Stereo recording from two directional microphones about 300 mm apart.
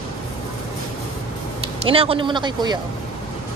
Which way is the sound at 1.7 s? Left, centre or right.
Centre.